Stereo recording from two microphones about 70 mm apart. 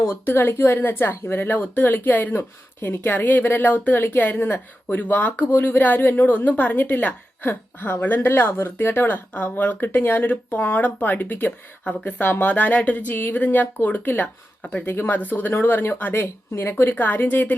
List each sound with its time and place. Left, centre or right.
0.0 s speech: left
14.6 s speech: centre
14.8 s speech: left